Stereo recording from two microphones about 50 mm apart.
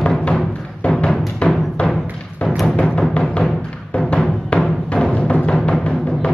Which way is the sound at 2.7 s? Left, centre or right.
Left.